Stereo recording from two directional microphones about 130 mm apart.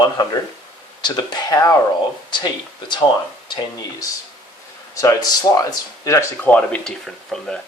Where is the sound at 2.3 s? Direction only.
35° left (ahead or behind).